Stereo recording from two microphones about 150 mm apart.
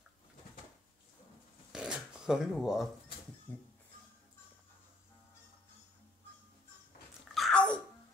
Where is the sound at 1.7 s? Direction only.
5° right (ahead or behind).